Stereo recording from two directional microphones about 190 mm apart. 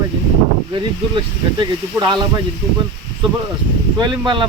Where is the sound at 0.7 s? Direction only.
25° right (ahead or behind).